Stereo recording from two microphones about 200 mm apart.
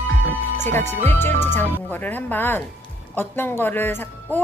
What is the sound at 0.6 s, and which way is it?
Speech, 10° left (ahead or behind).